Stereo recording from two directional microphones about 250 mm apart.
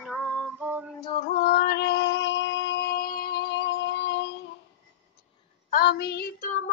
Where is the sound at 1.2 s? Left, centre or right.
Left.